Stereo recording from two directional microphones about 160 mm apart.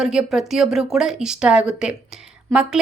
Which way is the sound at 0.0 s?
5° right (ahead or behind).